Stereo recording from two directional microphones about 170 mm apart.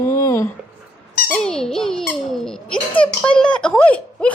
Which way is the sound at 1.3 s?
5° left (ahead or behind).